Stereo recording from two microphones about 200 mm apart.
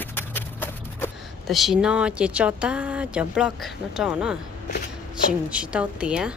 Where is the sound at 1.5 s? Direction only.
Centre (ahead or behind).